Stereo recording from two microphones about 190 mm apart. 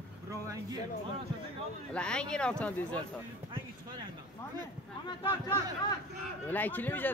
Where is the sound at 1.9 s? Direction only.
5° left (ahead or behind).